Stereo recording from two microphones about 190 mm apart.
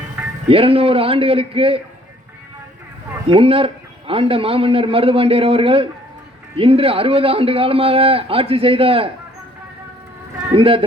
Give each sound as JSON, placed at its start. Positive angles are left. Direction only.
{"t": 0.4, "sound": "a man's voice", "side_deg": -30}
{"t": 3.2, "sound": "a man's voice", "side_deg": -30}
{"t": 10.5, "sound": "a man's voice", "side_deg": -30}